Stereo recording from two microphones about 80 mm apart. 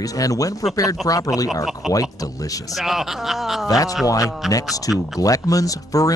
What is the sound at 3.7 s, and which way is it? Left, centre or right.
Speech, left.